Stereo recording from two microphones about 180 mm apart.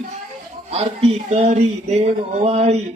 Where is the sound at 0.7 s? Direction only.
35° right (ahead or behind).